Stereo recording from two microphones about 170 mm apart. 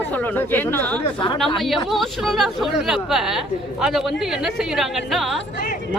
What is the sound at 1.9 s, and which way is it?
Speech, centre (ahead or behind).